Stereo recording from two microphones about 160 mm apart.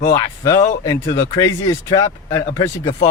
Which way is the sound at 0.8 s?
30° left (ahead or behind).